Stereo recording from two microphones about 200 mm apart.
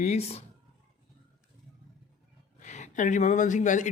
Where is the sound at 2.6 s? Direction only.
40° left (ahead or behind).